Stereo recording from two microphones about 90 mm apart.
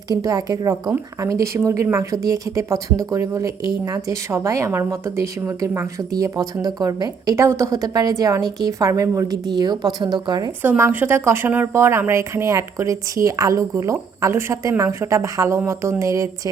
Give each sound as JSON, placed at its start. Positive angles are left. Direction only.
{"t": 0.1, "sound": "speech", "side_deg": -40}
{"t": 4.3, "sound": "speech", "side_deg": -30}
{"t": 6.3, "sound": "a woman's voice", "side_deg": -45}
{"t": 8.8, "sound": "a woman's voice", "side_deg": -35}
{"t": 10.6, "sound": "a woman's voice", "side_deg": -25}